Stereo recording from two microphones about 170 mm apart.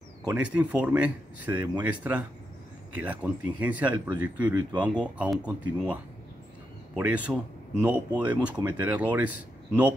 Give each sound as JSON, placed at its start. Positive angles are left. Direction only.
{"t": 0.3, "sound": "speech", "side_deg": -5}
{"t": 7.0, "sound": "speech", "side_deg": -5}